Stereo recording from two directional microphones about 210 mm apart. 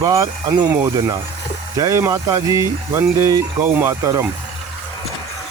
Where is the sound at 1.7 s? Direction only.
15° right (ahead or behind).